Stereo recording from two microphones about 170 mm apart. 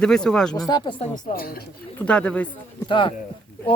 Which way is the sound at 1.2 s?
60° left (ahead or behind).